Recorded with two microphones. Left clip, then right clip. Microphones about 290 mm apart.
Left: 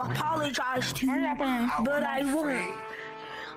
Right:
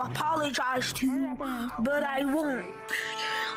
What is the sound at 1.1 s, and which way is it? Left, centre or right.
Speech, left.